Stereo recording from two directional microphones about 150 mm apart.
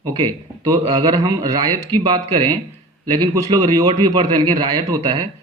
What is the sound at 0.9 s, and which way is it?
A man's voice, 25° right (ahead or behind).